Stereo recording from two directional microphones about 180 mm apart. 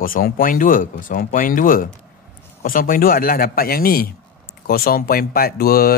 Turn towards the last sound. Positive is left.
turn(degrees=55)  # may be behind; listen again after turning